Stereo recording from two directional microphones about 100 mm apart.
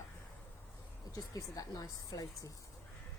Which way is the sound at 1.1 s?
40° left (ahead or behind).